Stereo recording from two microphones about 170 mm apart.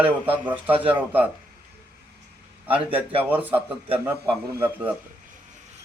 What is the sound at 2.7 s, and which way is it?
Speech, 10° right (ahead or behind).